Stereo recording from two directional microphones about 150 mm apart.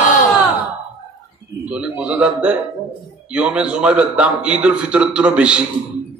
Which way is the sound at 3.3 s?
5° right (ahead or behind).